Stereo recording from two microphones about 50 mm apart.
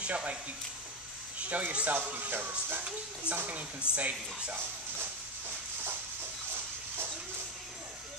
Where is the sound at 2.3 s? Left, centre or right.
Right.